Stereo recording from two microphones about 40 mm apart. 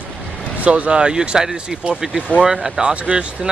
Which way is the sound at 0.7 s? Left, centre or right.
Right.